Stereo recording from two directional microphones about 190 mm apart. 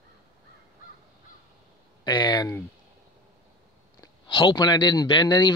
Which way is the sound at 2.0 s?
20° left (ahead or behind).